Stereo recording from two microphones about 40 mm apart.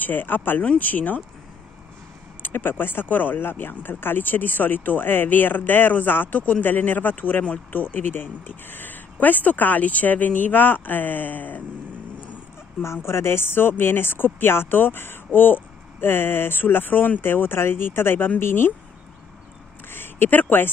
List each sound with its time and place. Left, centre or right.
0.0 s speech: left
2.4 s speech: left
12.9 s speech: left
18.4 s speech: left
19.9 s speech: left